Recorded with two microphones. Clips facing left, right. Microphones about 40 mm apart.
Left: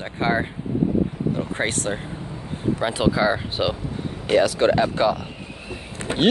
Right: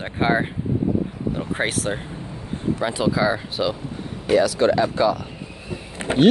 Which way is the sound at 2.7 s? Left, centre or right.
Left.